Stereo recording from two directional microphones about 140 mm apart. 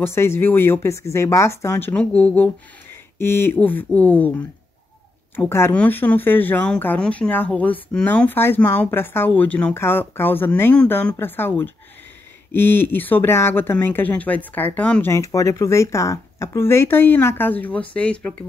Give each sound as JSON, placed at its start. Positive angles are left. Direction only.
{"t": 0.0, "sound": "speech", "side_deg": 15}